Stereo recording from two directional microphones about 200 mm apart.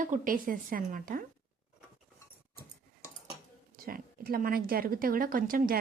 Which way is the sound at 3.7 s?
45° right (ahead or behind).